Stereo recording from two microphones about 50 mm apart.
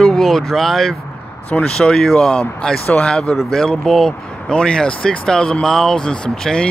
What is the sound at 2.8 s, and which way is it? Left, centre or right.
Speech, left.